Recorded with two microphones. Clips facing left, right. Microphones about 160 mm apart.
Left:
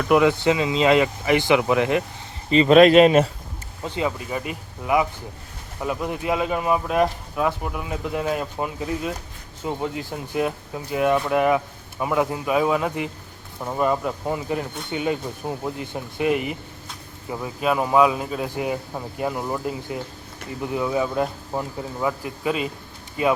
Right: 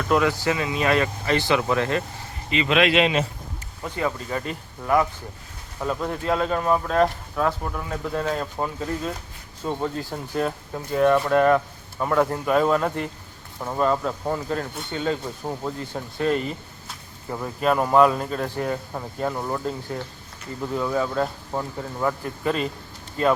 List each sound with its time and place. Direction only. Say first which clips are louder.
0.1 s speech: left 4 dB; 20° left (ahead or behind)
2.5 s speech: left 8 dB; 40° left (ahead or behind)
3.8 s speech: left 1 dB; 20° left (ahead or behind)